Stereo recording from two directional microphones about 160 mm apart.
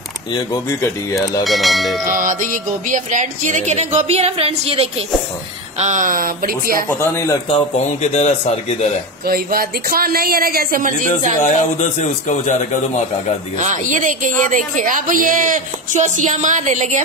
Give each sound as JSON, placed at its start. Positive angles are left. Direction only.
{"t": 0.3, "sound": "speech", "side_deg": 20}
{"t": 1.4, "sound": "speech", "side_deg": 0}
{"t": 2.0, "sound": "music", "side_deg": -55}
{"t": 5.8, "sound": "speech", "side_deg": -50}
{"t": 6.9, "sound": "speech", "side_deg": 15}
{"t": 7.4, "sound": "speech", "side_deg": 40}
{"t": 9.2, "sound": "speech", "side_deg": -70}
{"t": 11.4, "sound": "speech", "side_deg": 45}
{"t": 13.6, "sound": "music", "side_deg": -50}